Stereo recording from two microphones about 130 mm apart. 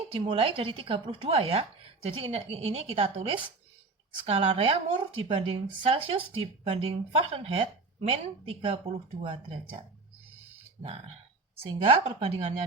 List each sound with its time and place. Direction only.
0.1 s speech: 45° right (ahead or behind)
12.0 s speech: 65° right (ahead or behind)